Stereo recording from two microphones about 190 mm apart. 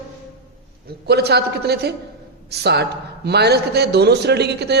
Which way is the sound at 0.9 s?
60° right (ahead or behind).